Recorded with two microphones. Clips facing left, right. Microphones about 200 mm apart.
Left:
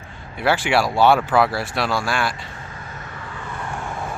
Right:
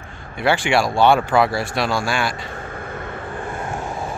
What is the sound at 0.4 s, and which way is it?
Speech, 5° left (ahead or behind).